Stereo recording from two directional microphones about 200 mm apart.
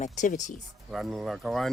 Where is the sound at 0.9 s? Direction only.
Centre (ahead or behind).